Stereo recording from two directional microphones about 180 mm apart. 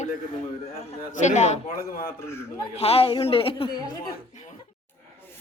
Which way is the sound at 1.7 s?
55° left (ahead or behind).